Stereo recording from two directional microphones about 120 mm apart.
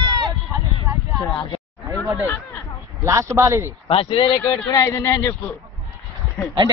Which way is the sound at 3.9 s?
50° left (ahead or behind).